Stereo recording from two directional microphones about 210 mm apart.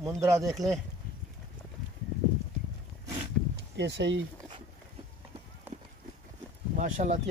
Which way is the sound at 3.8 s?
55° right (ahead or behind).